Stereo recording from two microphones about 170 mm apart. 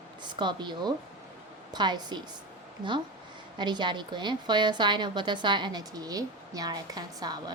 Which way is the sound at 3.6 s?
25° right (ahead or behind).